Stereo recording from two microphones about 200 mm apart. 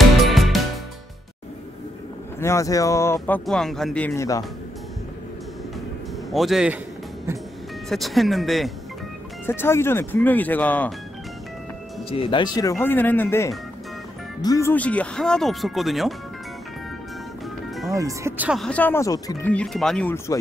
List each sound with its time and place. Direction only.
0.2 s music: centre (ahead or behind)
2.4 s speech: 15° left (ahead or behind)
6.3 s speech: centre (ahead or behind)
7.9 s speech: centre (ahead or behind)
9.5 s speech: 10° left (ahead or behind)
12.1 s speech: 25° left (ahead or behind); by 16.2 s centre (ahead or behind)
17.8 s speech: 15° right (ahead or behind)
18.5 s speech: 5° left (ahead or behind)
19.5 s speech: 5° left (ahead or behind)